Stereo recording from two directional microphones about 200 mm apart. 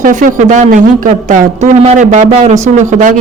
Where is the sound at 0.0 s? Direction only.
40° right (ahead or behind).